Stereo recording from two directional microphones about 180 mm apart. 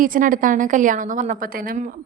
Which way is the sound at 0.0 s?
50° right (ahead or behind).